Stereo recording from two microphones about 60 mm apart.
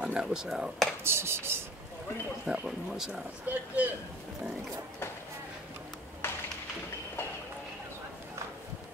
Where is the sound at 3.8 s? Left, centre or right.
Right.